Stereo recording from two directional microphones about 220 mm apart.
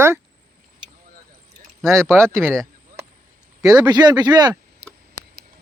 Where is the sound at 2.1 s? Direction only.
10° right (ahead or behind).